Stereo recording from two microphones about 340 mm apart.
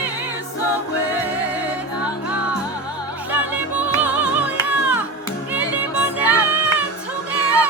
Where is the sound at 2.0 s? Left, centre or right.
Centre.